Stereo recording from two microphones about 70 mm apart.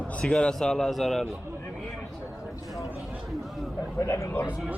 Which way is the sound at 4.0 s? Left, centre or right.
Left.